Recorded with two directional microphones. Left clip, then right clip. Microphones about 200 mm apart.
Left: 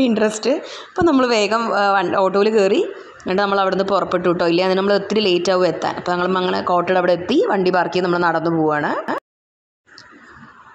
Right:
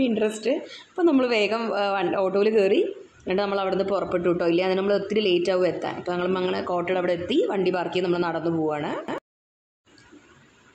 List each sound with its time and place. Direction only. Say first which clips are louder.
0.0 s a woman's voice: left 6 dB; 25° left (ahead or behind)